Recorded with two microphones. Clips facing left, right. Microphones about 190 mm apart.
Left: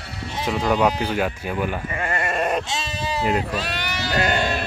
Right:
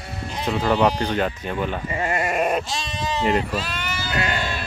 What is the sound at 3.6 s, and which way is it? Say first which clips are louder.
Sheep: left 1 dB; 65° left (ahead or behind).